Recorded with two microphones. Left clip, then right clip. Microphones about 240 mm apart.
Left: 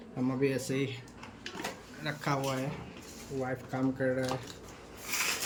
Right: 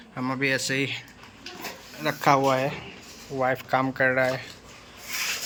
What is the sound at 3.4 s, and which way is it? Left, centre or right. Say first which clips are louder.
Speech: right 12 dB; right.